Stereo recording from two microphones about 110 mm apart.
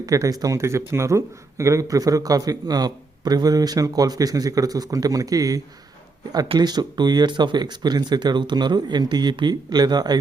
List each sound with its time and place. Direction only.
0.0 s speech: 30° right (ahead or behind)